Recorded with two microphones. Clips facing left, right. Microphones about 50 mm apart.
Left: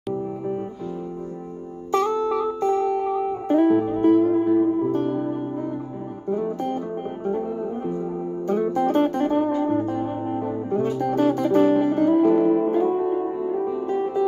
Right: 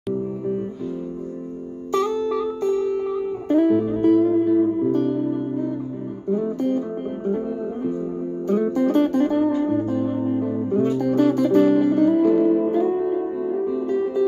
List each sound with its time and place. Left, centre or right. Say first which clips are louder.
1.9 s music: even; left
8.5 s music: right 1 dB; centre